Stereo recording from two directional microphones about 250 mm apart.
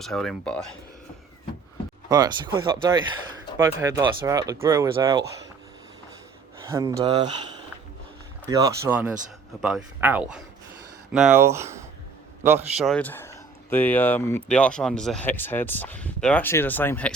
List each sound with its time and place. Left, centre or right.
0.0 s speech: centre
2.0 s speech: centre
6.7 s speech: centre
8.4 s a man's voice: centre
12.8 s speech: centre